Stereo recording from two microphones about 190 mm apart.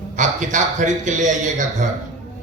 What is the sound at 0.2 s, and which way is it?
A man's voice, 40° right (ahead or behind).